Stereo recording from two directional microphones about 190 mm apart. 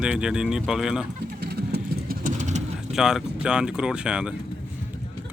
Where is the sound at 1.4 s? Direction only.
55° right (ahead or behind); by 2.6 s 40° right (ahead or behind).